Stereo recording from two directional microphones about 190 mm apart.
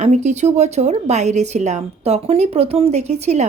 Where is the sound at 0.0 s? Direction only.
35° right (ahead or behind).